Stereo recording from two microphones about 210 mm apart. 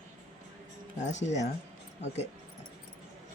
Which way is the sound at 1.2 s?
35° left (ahead or behind).